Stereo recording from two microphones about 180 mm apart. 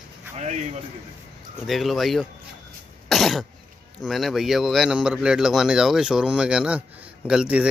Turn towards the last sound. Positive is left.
turn(degrees=-5)  # may be behind; listen again after turning